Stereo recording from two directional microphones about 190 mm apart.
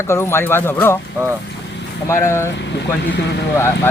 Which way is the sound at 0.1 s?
15° left (ahead or behind).